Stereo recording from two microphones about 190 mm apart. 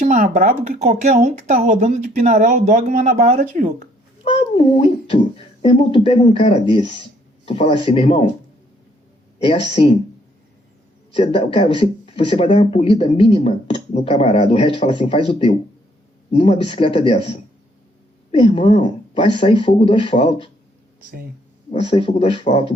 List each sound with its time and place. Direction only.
0.0 s speech: 40° right (ahead or behind)
4.2 s speech: 35° left (ahead or behind)
9.7 s speech: 30° left (ahead or behind)
11.2 s speech: 30° left (ahead or behind)
21.7 s speech: 30° left (ahead or behind)